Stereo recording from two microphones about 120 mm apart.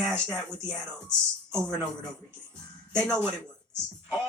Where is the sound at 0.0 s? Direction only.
5° left (ahead or behind).